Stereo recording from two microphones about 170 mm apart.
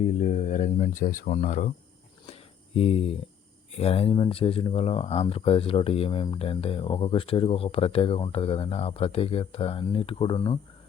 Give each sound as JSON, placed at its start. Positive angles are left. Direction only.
{"t": 0.1, "sound": "speech", "side_deg": 45}
{"t": 2.2, "sound": "a sound", "side_deg": 35}
{"t": 3.8, "sound": "speech", "side_deg": 35}